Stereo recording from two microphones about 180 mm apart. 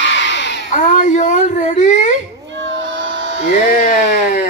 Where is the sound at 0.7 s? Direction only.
45° left (ahead or behind).